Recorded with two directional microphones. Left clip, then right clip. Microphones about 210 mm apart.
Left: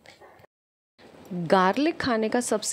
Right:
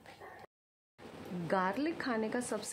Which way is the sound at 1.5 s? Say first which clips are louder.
Left 12 dB; 35° left (ahead or behind).